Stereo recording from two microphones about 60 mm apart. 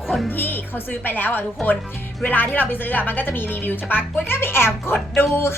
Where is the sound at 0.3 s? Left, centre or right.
Left.